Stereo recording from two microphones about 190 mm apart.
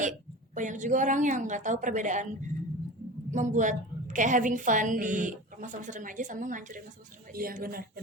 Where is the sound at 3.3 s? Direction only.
40° right (ahead or behind).